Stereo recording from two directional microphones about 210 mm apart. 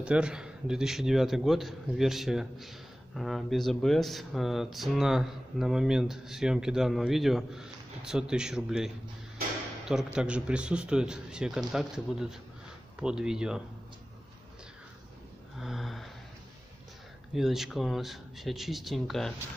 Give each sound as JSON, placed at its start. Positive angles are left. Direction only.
{"t": 0.0, "sound": "speech", "side_deg": -5}
{"t": 15.6, "sound": "a sound", "side_deg": 0}
{"t": 17.3, "sound": "speech", "side_deg": 0}